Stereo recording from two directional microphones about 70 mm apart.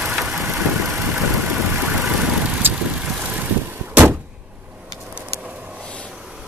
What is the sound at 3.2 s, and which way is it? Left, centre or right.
Vehicle, right.